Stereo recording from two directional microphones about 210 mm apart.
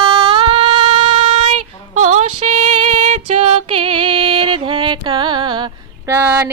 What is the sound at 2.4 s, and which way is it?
Female singing, 35° right (ahead or behind).